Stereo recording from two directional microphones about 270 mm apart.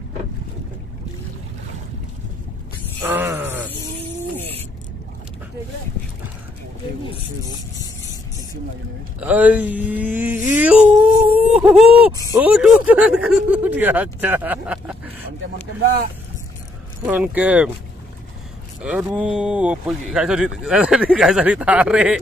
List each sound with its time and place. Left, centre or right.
3.0 s groan: centre
9.2 s speech: centre
11.3 s a sound: centre
12.1 s speech: centre
15.8 s speech: right
17.0 s speech: centre
18.8 s speech: centre